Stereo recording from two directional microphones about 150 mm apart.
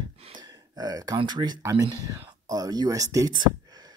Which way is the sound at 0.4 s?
25° right (ahead or behind).